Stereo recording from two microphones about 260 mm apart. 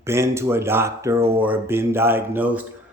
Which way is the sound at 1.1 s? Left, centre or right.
Right.